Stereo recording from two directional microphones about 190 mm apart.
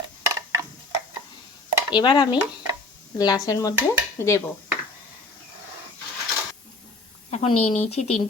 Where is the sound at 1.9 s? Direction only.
25° left (ahead or behind).